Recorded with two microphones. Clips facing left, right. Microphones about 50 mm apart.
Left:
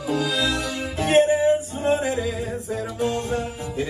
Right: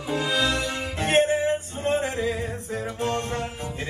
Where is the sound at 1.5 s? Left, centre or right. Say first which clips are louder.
Left 4 dB; right.